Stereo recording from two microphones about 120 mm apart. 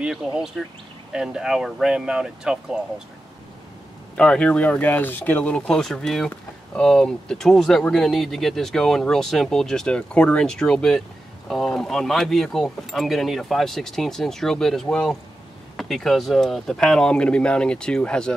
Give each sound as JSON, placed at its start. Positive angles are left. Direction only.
{"t": 0.6, "sound": "speech", "side_deg": 5}
{"t": 1.1, "sound": "speech", "side_deg": -5}
{"t": 4.1, "sound": "speech", "side_deg": 10}